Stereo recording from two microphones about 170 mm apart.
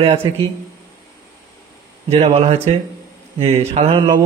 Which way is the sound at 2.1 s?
40° right (ahead or behind).